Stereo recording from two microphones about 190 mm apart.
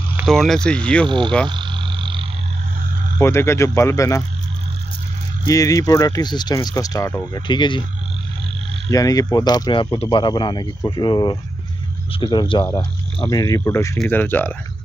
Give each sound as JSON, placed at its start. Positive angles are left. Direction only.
{"t": 0.3, "sound": "speech", "side_deg": 0}
{"t": 1.0, "sound": "speech", "side_deg": -25}
{"t": 1.5, "sound": "a sound", "side_deg": -25}
{"t": 3.2, "sound": "speech", "side_deg": 15}
{"t": 5.4, "sound": "speech", "side_deg": 15}
{"t": 8.9, "sound": "speech", "side_deg": 20}